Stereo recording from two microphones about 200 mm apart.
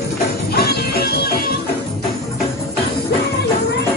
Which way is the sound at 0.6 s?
50° left (ahead or behind).